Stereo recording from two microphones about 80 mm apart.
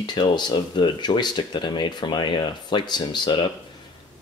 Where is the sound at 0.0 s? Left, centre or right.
Left.